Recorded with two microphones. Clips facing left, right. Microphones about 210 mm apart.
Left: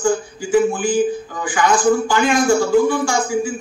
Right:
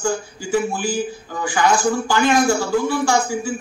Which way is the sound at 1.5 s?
40° right (ahead or behind).